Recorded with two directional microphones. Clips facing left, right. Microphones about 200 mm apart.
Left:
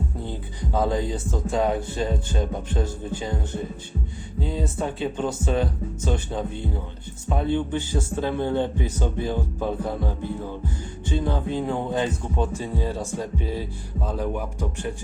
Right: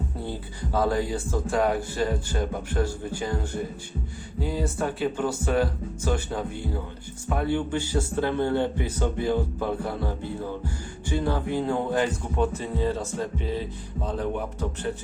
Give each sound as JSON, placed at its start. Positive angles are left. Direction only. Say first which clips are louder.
{"t": 0.3, "sound": "speech", "louder": "left 1 dB", "side_deg": 20}